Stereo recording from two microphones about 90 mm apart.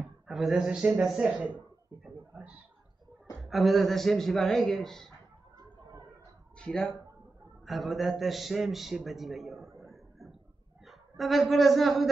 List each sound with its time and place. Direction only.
0.0 s a man's voice: 5° right (ahead or behind)
2.0 s a sound: 20° right (ahead or behind)
3.3 s a man's voice: centre (ahead or behind)
6.6 s speech: 10° left (ahead or behind)
7.6 s a man's voice: centre (ahead or behind)
10.9 s a woman's voice: centre (ahead or behind)